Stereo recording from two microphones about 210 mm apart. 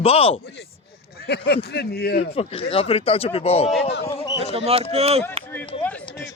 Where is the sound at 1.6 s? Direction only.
50° left (ahead or behind).